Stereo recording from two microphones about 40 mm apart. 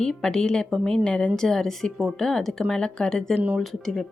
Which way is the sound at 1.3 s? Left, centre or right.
Centre.